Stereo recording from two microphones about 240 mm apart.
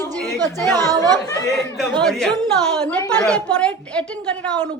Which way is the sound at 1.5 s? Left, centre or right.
Centre.